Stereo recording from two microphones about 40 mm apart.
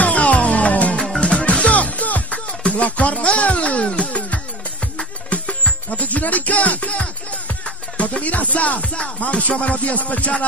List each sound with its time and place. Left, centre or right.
0.0 s music: left